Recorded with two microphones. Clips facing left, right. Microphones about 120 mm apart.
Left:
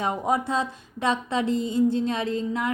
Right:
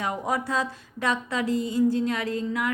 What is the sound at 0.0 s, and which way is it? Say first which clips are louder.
A woman's voice: left 3 dB; 20° left (ahead or behind).